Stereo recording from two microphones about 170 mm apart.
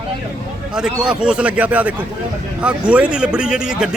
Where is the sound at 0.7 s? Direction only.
5° right (ahead or behind).